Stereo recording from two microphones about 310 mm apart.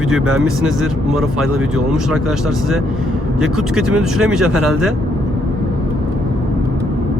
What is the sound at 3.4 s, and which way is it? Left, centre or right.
Speech, centre.